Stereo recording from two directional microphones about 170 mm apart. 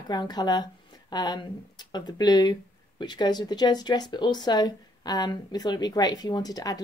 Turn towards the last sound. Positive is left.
turn(degrees=20)  # may be behind; listen again after turning